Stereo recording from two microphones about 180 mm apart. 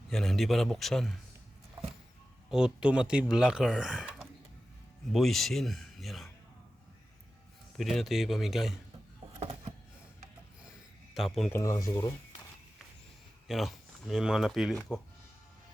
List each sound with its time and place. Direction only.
0.1 s speech: centre (ahead or behind)
2.5 s speech: 5° right (ahead or behind)
7.8 s speech: centre (ahead or behind)
9.4 s a sound: 35° right (ahead or behind)
11.1 s speech: centre (ahead or behind)
11.8 s speech: 20° left (ahead or behind)
13.5 s speech: centre (ahead or behind)